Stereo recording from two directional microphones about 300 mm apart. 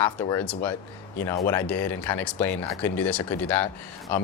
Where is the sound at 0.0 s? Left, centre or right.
Centre.